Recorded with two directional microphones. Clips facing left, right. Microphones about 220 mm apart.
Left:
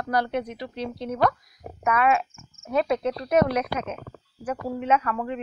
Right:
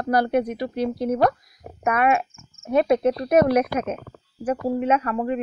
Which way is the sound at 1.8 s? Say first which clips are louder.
Right 2 dB; 55° right (ahead or behind).